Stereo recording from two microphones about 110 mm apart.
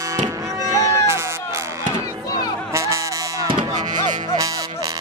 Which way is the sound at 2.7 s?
25° right (ahead or behind).